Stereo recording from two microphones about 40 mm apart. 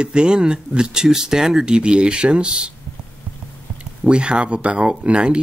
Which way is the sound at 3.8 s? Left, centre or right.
Right.